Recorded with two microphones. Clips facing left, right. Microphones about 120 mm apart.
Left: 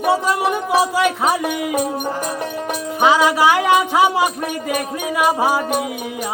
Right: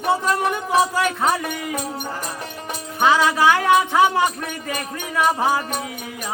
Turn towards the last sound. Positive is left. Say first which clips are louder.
# left 3 dB
turn(degrees=10)  # may be behind; listen again after turning